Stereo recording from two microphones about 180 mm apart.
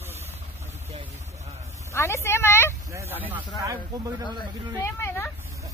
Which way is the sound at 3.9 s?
20° right (ahead or behind).